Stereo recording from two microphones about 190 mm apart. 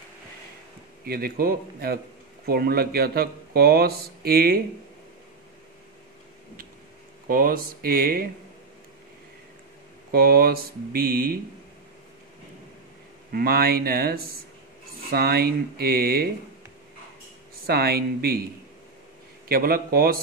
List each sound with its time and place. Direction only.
1.0 s speech: 50° right (ahead or behind)
7.2 s speech: 50° right (ahead or behind)
10.1 s speech: 50° right (ahead or behind)
13.3 s speech: 50° right (ahead or behind)
17.6 s speech: 55° right (ahead or behind)
19.4 s speech: 50° right (ahead or behind)